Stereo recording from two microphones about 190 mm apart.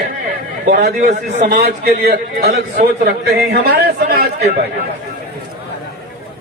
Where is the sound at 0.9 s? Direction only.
60° right (ahead or behind).